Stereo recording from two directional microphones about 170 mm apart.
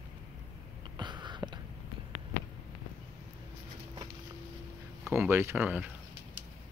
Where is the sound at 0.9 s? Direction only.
25° right (ahead or behind).